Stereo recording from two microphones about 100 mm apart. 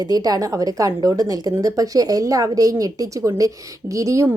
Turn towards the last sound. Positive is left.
turn(degrees=-30)  # may be behind; listen again after turning